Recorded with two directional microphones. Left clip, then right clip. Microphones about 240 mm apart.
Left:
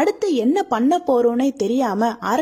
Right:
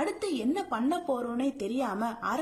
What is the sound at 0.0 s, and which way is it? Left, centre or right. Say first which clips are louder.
A woman's voice: left 12 dB; left.